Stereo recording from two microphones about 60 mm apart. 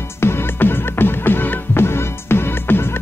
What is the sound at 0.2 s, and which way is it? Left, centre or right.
Music, left.